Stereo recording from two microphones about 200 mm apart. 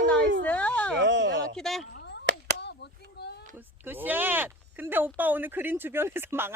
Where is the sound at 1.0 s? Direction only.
60° right (ahead or behind).